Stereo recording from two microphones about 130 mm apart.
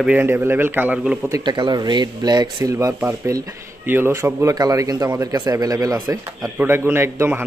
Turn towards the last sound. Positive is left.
turn(degrees=-15)  # may be behind; listen again after turning